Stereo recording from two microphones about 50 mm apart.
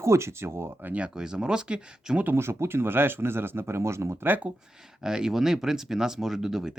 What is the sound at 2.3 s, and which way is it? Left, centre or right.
Speech, right.